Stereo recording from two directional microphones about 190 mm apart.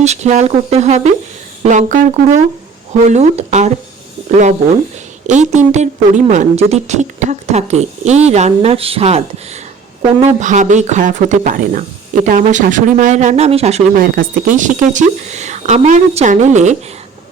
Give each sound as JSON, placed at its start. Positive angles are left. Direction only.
{"t": 0.0, "sound": "a woman's voice", "side_deg": -35}
{"t": 5.3, "sound": "a woman's voice", "side_deg": -40}
{"t": 13.9, "sound": "a woman's voice", "side_deg": -50}